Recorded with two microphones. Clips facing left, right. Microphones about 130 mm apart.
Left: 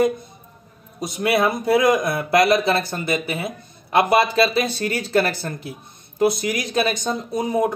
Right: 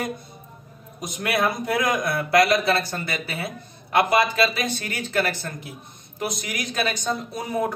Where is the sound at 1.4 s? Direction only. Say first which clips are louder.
Left 6 dB; 25° left (ahead or behind).